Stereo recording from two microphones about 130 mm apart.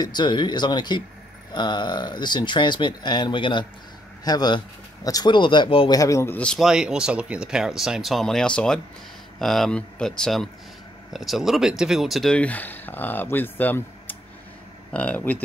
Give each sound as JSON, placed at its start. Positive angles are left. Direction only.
{"t": 0.0, "sound": "speech", "side_deg": 35}
{"t": 5.9, "sound": "speech", "side_deg": 25}
{"t": 6.3, "sound": "speech", "side_deg": 5}
{"t": 6.7, "sound": "speech", "side_deg": -5}